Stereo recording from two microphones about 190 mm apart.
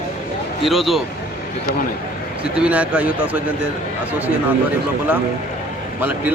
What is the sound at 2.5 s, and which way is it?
Speech, 5° right (ahead or behind).